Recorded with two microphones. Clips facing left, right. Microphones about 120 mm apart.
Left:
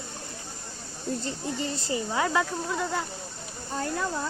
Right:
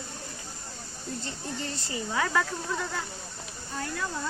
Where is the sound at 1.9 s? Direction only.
25° left (ahead or behind).